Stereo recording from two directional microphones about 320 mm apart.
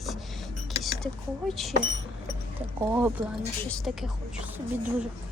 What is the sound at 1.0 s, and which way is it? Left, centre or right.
Speech, centre.